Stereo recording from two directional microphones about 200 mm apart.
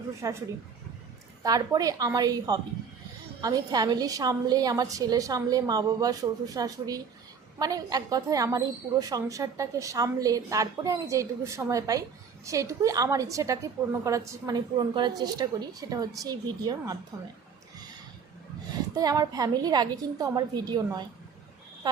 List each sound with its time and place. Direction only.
0.2 s a woman's voice: 15° right (ahead or behind)
1.5 s a woman's voice: 20° right (ahead or behind)
18.9 s a woman's voice: 20° right (ahead or behind)